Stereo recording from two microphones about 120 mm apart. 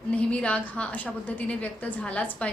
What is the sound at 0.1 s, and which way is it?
A woman's voice, 10° left (ahead or behind).